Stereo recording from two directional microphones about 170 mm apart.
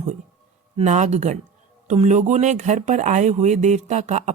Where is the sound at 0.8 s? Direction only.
45° right (ahead or behind).